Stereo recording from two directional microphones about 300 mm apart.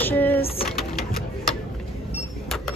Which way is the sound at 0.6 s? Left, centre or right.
Centre.